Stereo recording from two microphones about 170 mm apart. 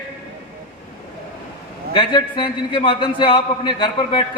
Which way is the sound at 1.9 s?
30° left (ahead or behind).